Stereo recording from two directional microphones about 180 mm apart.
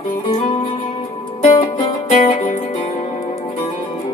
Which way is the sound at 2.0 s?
40° left (ahead or behind).